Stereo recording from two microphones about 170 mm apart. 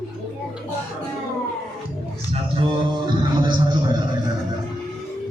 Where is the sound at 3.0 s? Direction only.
25° right (ahead or behind).